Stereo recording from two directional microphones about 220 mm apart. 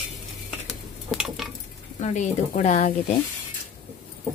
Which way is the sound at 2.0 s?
30° left (ahead or behind).